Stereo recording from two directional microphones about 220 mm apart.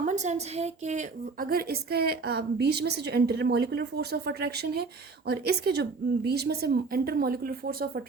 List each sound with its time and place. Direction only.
0.0 s a woman's voice: 30° right (ahead or behind)